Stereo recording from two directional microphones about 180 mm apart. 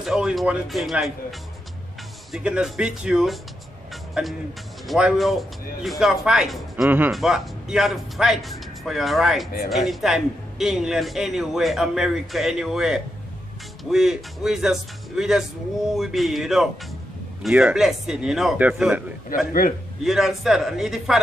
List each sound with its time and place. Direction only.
0.0 s speech: centre (ahead or behind)
2.3 s speech: 5° right (ahead or behind)
3.9 s music: centre (ahead or behind)
4.8 s speech: centre (ahead or behind)
19.2 s a man's voice: 50° left (ahead or behind)
20.0 s speech: centre (ahead or behind)